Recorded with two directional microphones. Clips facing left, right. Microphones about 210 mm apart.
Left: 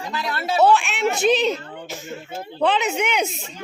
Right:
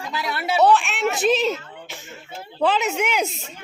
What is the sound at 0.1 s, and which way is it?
Speech, 10° right (ahead or behind).